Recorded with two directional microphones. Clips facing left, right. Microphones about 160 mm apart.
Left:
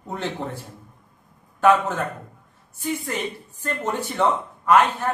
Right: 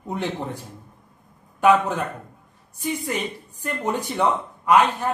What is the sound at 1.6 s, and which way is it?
Speech, 15° right (ahead or behind).